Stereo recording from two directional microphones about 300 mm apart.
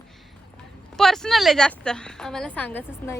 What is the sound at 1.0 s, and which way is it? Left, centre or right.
A woman's voice, centre.